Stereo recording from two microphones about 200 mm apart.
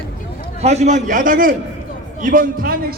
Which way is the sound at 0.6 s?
35° right (ahead or behind).